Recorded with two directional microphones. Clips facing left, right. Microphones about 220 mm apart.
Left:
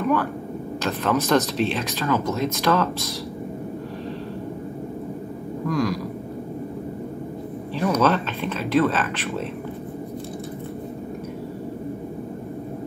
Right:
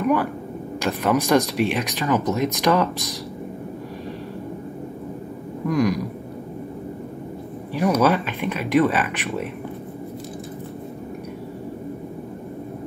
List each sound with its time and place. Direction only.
0.8 s speech: 15° right (ahead or behind)
5.7 s speech: 20° right (ahead or behind)
7.7 s speech: 10° right (ahead or behind)